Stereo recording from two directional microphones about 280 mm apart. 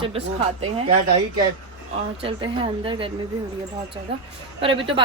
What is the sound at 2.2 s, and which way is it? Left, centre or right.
Speech, centre.